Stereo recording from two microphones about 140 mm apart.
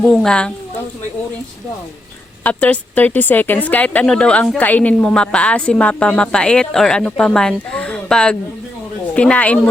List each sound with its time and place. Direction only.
0.0 s a woman's voice: 5° left (ahead or behind)
2.4 s speech: 10° left (ahead or behind)